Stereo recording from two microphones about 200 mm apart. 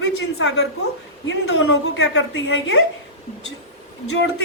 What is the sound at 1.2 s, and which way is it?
A woman's voice, 80° left.